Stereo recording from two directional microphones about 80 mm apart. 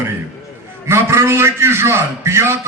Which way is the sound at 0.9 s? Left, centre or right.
Right.